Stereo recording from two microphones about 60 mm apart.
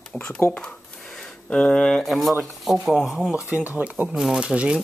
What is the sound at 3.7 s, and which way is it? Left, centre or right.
Speech, right.